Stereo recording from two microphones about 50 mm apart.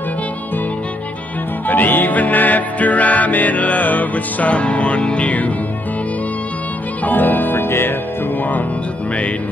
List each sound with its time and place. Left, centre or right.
1.7 s music: left
7.1 s music: left